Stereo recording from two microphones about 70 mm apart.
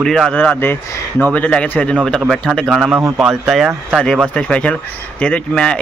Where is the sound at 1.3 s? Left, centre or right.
Centre.